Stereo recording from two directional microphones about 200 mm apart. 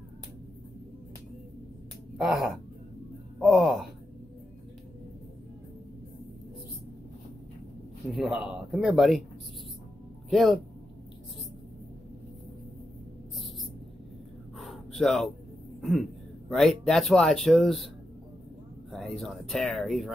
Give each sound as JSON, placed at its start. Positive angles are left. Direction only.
{"t": 2.1, "sound": "speech", "side_deg": 0}
{"t": 8.1, "sound": "speech", "side_deg": 0}
{"t": 10.3, "sound": "speech", "side_deg": 0}
{"t": 14.6, "sound": "gasp", "side_deg": 0}
{"t": 15.8, "sound": "speech", "side_deg": 0}
{"t": 18.9, "sound": "speech", "side_deg": 0}